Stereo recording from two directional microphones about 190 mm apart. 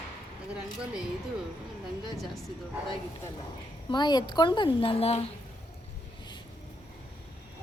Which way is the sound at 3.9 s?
20° left (ahead or behind).